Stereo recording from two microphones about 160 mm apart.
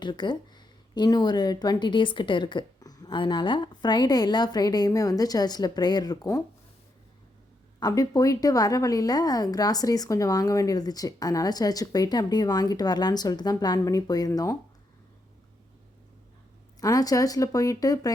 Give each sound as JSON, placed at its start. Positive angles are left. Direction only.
{"t": 0.0, "sound": "a woman's voice", "side_deg": 30}
{"t": 7.8, "sound": "a woman's voice", "side_deg": 25}
{"t": 16.8, "sound": "a woman's voice", "side_deg": 20}